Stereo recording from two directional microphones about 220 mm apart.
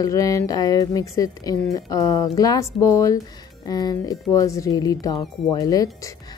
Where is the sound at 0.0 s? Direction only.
15° left (ahead or behind).